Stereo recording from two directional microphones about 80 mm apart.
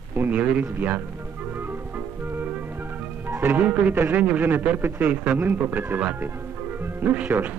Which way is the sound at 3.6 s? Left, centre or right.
Centre.